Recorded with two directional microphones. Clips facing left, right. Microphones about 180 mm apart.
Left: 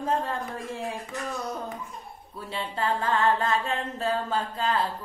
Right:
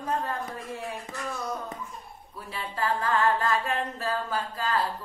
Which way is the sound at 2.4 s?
25° left (ahead or behind).